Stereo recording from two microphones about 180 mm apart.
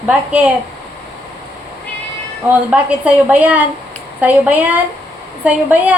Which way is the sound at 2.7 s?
10° right (ahead or behind).